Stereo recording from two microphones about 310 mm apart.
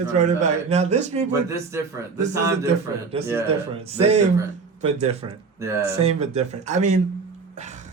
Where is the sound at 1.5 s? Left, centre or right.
Centre.